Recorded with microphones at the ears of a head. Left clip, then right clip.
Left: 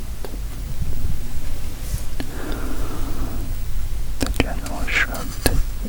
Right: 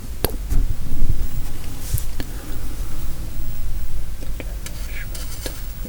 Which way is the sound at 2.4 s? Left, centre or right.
Left.